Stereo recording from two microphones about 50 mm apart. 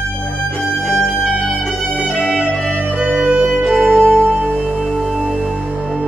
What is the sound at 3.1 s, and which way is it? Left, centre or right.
Music, right.